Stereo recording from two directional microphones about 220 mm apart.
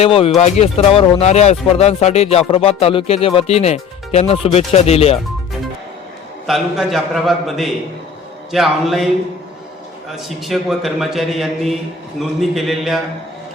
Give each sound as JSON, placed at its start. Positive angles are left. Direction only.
{"t": 0.0, "sound": "speech", "side_deg": 25}
{"t": 6.5, "sound": "a man's voice", "side_deg": 0}
{"t": 10.1, "sound": "a man's voice", "side_deg": 0}